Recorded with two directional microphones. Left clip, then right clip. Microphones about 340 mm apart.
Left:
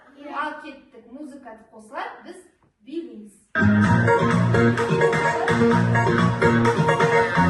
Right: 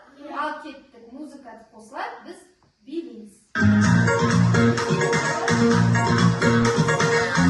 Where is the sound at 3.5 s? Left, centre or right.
Centre.